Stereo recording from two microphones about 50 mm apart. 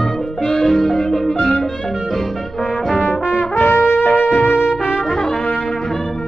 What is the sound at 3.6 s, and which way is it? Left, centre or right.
Music, left.